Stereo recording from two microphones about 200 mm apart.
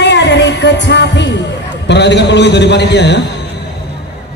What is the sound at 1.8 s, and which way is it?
A man's voice, 60° left (ahead or behind).